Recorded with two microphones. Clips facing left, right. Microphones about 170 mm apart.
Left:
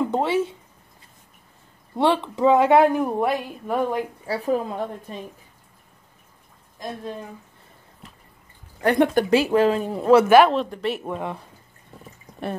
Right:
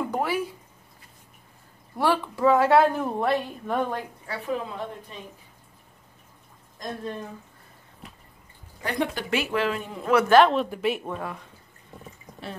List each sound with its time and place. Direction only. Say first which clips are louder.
0.1 s speech: left 5 dB; 25° left (ahead or behind)
2.0 s speech: left 4 dB; 20° left (ahead or behind)
4.3 s speech: left 6 dB; 40° left (ahead or behind)
8.8 s speech: left 10 dB; 55° left (ahead or behind)
9.3 s speech: left 8 dB; 35° left (ahead or behind)
10.2 s speech: right 1 dB; 10° left (ahead or behind)
10.5 s speech: left 1 dB; 5° right (ahead or behind)
11.1 s speech: left 4 dB; 20° left (ahead or behind)